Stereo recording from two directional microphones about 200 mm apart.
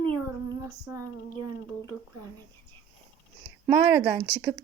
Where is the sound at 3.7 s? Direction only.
5° right (ahead or behind).